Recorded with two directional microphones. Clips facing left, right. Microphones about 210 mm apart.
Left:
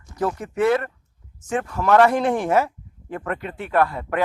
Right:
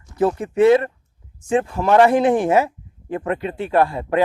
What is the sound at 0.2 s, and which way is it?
A man's voice, 25° right (ahead or behind).